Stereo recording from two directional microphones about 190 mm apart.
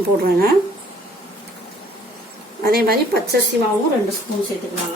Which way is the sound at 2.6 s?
55° right (ahead or behind).